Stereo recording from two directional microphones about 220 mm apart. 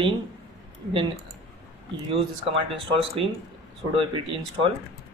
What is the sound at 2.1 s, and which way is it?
A man's voice, 25° right (ahead or behind).